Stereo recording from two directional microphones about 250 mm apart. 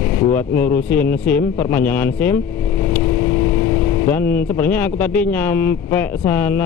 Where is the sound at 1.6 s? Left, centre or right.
Centre.